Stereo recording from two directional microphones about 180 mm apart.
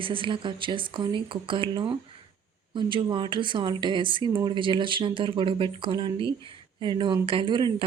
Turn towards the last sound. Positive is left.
turn(degrees=-25)  # may be behind; listen again after turning